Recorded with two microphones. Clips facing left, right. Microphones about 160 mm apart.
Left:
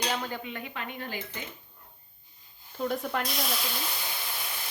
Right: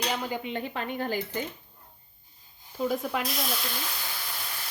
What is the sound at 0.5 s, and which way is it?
Speech, 35° right (ahead or behind).